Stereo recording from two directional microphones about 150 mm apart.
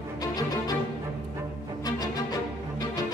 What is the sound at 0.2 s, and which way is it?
Music, 25° left (ahead or behind).